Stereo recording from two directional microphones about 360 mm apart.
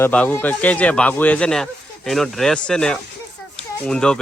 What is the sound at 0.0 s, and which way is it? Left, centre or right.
Speech, centre.